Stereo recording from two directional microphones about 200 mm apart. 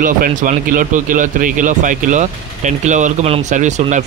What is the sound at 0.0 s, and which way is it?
Speech, 40° right (ahead or behind).